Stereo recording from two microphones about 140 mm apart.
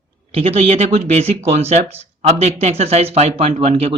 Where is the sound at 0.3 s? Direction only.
45° right (ahead or behind).